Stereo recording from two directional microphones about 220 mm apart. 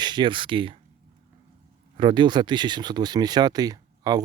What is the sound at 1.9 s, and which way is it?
Speech, 20° right (ahead or behind).